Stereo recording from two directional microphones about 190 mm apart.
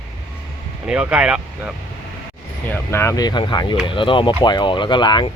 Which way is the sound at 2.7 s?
10° left (ahead or behind).